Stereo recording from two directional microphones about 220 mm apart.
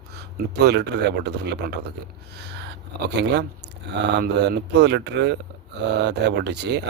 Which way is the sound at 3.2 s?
50° right (ahead or behind).